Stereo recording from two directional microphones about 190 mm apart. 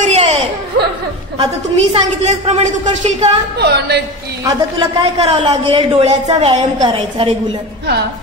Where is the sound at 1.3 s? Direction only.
35° right (ahead or behind).